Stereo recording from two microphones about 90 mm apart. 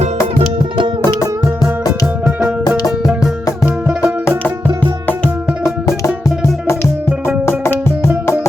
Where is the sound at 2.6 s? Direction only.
45° left (ahead or behind).